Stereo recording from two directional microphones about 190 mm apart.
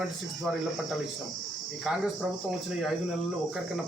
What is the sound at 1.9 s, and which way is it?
Speech, centre (ahead or behind).